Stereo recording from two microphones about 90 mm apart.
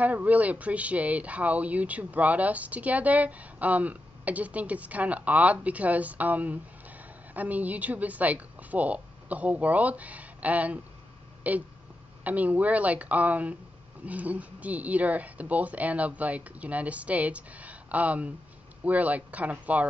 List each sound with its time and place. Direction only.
0.0 s speech: 15° right (ahead or behind)